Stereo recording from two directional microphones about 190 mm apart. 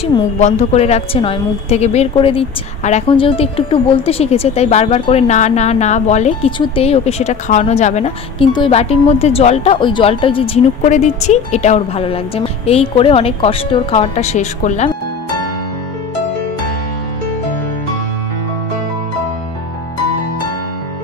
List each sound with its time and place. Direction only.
0.0 s a woman's voice: 35° left (ahead or behind)